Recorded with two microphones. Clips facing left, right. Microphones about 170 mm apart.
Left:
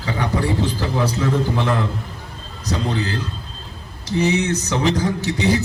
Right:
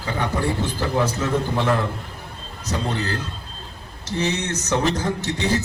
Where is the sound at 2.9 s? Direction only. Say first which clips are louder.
Left 3 dB; 60° right (ahead or behind).